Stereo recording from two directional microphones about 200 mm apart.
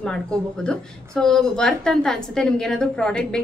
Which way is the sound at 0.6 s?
5° left (ahead or behind).